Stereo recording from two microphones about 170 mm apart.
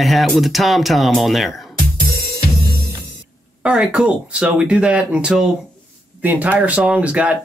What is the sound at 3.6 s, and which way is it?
Speech, 5° right (ahead or behind).